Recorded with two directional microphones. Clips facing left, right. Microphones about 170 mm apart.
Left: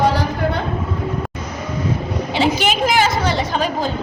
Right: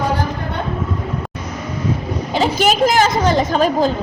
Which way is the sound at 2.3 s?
40° right (ahead or behind).